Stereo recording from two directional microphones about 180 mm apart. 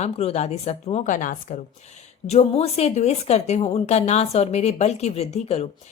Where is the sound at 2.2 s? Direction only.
35° left (ahead or behind).